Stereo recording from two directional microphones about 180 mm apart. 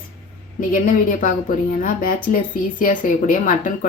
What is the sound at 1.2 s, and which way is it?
Speech, 50° left (ahead or behind).